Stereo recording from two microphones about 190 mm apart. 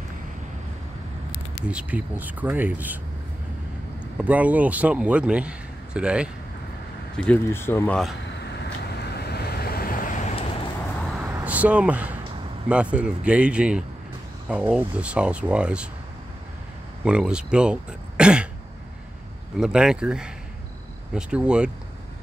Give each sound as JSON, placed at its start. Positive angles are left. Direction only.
{"t": 1.7, "sound": "a man's voice", "side_deg": -5}
{"t": 4.2, "sound": "a man's voice", "side_deg": -10}
{"t": 7.2, "sound": "speech", "side_deg": 10}
{"t": 9.0, "sound": "vehicle", "side_deg": 60}
{"t": 11.1, "sound": "a sound", "side_deg": -5}
{"t": 12.6, "sound": "a man's voice", "side_deg": -5}
{"t": 17.0, "sound": "speech", "side_deg": -5}
{"t": 19.6, "sound": "speech", "side_deg": -5}